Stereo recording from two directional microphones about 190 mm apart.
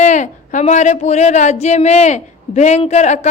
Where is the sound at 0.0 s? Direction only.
40° left (ahead or behind).